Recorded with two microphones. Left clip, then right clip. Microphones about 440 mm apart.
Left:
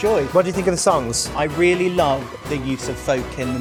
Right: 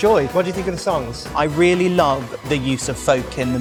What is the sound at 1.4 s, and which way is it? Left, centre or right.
A man's voice, right.